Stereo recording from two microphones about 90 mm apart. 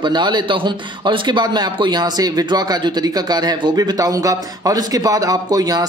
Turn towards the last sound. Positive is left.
turn(degrees=-45)  # may be behind; listen again after turning